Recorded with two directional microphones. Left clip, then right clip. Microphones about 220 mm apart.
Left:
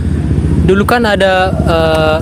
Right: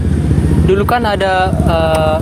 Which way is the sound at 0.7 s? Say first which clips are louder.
Left 3 dB; 50° left (ahead or behind).